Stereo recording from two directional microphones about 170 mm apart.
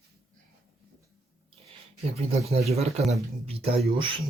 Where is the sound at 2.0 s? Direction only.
35° right (ahead or behind).